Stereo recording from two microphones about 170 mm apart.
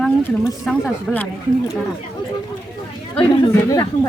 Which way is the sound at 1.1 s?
10° left (ahead or behind).